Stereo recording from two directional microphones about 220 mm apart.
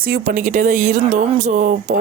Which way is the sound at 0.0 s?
40° right (ahead or behind).